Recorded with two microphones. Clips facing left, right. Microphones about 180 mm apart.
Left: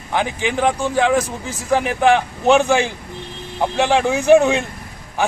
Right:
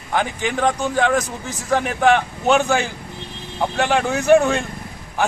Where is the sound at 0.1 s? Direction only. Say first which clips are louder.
Left 1 dB; 15° left (ahead or behind).